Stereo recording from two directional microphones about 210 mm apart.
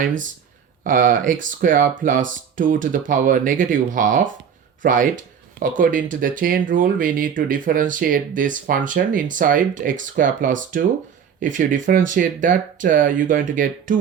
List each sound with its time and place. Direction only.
0.0 s speech: 40° right (ahead or behind)